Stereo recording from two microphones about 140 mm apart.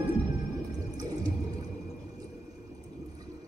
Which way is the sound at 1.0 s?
25° right (ahead or behind).